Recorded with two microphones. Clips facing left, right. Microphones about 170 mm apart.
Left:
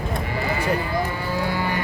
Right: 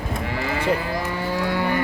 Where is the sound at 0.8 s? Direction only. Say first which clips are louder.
Left 1 dB; 75° right (ahead or behind); by 1.8 s 60° right (ahead or behind).